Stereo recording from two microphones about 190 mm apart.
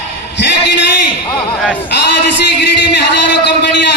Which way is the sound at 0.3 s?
65° left (ahead or behind).